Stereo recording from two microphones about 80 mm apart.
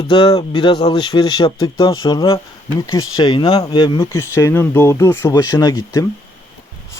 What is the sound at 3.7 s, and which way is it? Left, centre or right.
Speech, left.